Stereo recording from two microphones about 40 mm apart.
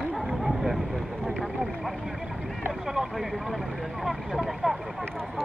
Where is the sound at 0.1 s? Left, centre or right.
Centre.